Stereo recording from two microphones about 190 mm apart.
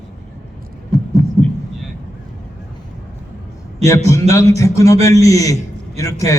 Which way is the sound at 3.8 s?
15° left (ahead or behind).